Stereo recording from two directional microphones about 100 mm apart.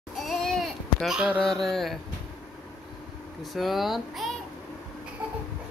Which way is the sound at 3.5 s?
Centre (ahead or behind).